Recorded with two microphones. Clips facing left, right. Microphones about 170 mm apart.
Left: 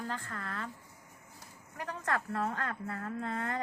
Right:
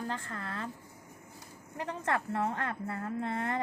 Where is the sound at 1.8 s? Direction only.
25° right (ahead or behind).